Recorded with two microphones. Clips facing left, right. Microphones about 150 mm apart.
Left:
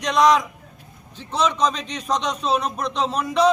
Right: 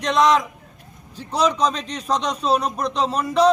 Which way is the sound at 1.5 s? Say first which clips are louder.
Right 1 dB; 10° right (ahead or behind).